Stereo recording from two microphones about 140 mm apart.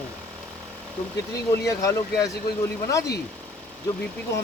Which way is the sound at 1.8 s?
25° left (ahead or behind).